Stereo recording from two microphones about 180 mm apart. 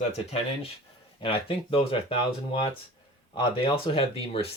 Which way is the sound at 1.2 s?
30° left (ahead or behind).